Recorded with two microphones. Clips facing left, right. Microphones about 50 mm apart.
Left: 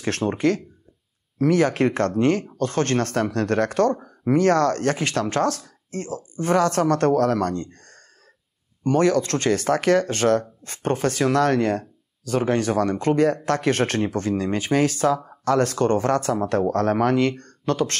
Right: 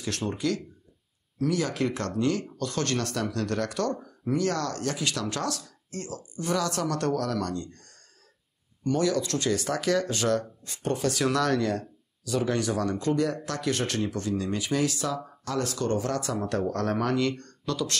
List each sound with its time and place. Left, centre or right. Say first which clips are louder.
0.2 s speech: left 8 dB; left